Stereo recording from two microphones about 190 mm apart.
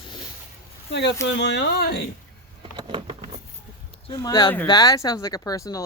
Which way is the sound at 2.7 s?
25° right (ahead or behind).